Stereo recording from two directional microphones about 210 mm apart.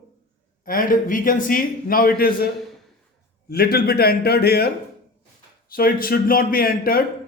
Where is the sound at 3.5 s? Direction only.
45° left (ahead or behind).